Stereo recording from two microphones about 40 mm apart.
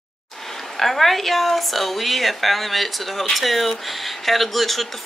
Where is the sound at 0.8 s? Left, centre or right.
Centre.